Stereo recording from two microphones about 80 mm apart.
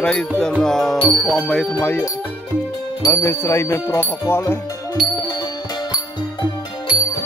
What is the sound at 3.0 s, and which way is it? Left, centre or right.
Speech, left.